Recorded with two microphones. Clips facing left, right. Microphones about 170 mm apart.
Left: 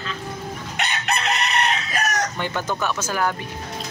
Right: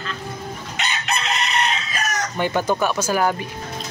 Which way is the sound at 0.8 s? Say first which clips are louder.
Even; 60° left (ahead or behind).